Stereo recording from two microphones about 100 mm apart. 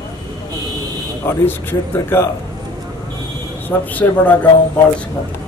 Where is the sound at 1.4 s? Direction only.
25° left (ahead or behind).